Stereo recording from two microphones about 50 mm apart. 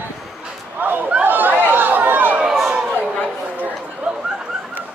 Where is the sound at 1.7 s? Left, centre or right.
Right.